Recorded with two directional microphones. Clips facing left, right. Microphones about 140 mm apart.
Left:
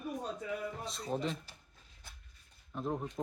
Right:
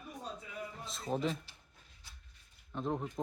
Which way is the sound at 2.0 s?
55° left (ahead or behind).